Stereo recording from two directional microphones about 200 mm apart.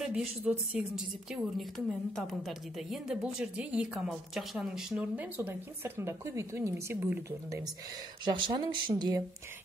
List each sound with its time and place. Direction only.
0.0 s speech: 5° right (ahead or behind)
8.3 s speech: 20° right (ahead or behind)